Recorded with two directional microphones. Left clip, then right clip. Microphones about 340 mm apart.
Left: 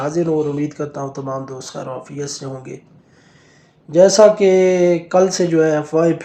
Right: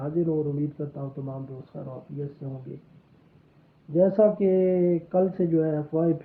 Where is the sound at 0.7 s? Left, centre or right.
Centre.